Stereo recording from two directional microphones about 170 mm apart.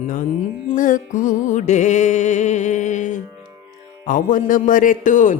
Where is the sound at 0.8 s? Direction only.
50° left (ahead or behind).